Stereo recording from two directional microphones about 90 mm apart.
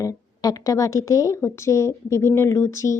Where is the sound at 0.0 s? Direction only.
40° left (ahead or behind).